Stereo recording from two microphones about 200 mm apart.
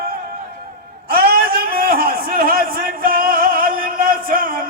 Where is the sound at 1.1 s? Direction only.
50° right (ahead or behind).